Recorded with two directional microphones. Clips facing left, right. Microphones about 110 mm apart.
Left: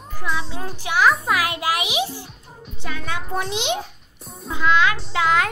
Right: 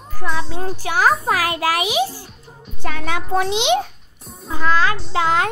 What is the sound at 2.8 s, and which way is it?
Speech, 80° right.